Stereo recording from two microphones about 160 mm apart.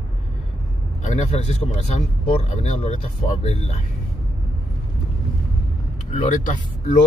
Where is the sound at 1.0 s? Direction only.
45° left (ahead or behind).